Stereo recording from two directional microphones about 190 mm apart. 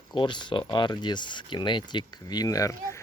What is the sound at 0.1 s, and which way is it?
Speech, 25° left (ahead or behind).